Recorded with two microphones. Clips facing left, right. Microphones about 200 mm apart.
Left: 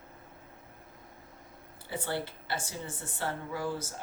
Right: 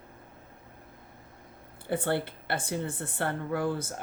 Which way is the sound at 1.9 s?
55° right (ahead or behind).